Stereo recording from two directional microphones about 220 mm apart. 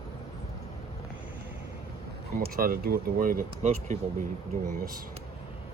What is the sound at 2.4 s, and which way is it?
Speech, 40° right (ahead or behind).